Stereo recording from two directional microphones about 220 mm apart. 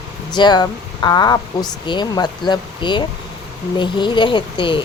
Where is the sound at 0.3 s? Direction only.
20° left (ahead or behind).